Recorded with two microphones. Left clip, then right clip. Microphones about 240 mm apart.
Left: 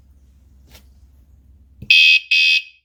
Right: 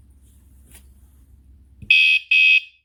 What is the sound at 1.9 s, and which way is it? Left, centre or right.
Fire alarm, left.